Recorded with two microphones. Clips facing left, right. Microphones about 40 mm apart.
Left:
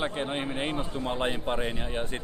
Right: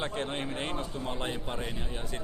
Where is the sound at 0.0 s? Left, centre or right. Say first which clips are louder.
Left 3 dB; centre.